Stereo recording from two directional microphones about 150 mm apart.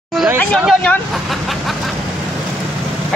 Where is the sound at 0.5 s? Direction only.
5° right (ahead or behind).